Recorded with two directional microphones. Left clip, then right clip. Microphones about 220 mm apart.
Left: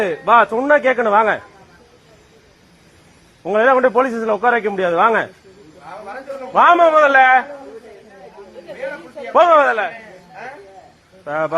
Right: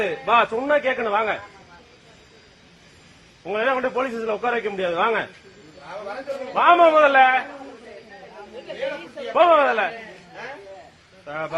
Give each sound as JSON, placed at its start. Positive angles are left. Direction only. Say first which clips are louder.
{"t": 0.3, "sound": "a man's voice", "louder": "left 7 dB", "side_deg": 35}
{"t": 3.4, "sound": "a man's voice", "louder": "left 9 dB", "side_deg": 55}
{"t": 6.5, "sound": "a man's voice", "louder": "left 4 dB", "side_deg": 50}
{"t": 9.3, "sound": "speech", "louder": "left 5 dB", "side_deg": 55}
{"t": 11.3, "sound": "speech", "louder": "left 9 dB", "side_deg": 55}